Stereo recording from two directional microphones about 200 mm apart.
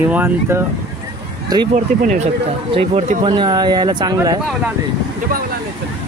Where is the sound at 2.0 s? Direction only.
40° right (ahead or behind); by 4.4 s 20° right (ahead or behind).